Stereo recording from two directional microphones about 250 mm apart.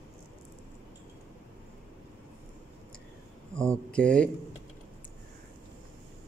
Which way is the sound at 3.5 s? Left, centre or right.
Centre.